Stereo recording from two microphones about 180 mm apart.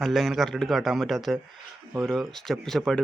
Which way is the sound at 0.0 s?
Centre (ahead or behind).